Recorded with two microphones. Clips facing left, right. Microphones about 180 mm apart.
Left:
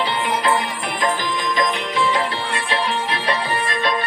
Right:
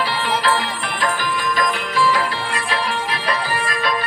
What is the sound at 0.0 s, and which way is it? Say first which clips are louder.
Music: even; 20° left (ahead or behind).